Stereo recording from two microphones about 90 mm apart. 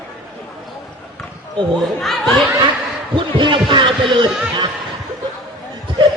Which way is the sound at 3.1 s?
70° right (ahead or behind).